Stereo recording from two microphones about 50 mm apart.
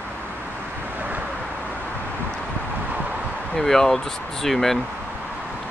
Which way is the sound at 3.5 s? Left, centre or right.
Centre.